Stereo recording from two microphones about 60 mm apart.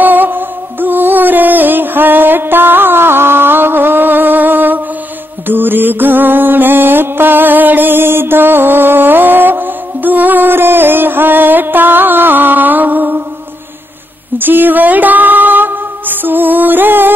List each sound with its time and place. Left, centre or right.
0.0 s music: right
14.4 s music: right